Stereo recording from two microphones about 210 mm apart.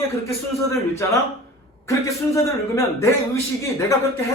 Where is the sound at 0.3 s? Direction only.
15° left (ahead or behind).